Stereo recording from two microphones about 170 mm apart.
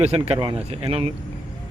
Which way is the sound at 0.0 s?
35° right (ahead or behind).